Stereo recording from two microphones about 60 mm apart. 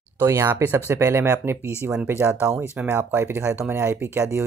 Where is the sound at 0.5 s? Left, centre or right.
Right.